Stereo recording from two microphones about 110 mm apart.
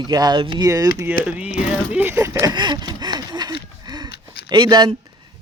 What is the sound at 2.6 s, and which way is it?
Gasp, 40° right (ahead or behind).